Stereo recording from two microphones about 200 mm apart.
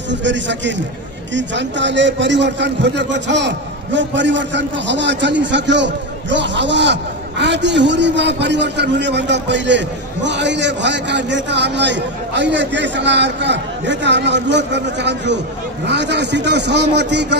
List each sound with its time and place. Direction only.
0.1 s a man's voice: 65° right (ahead or behind)